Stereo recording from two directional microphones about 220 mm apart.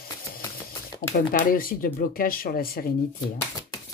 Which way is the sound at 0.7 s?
40° left (ahead or behind).